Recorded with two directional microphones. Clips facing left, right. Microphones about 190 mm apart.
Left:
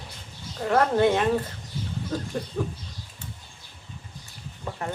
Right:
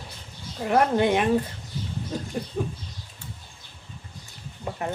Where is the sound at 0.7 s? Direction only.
15° right (ahead or behind).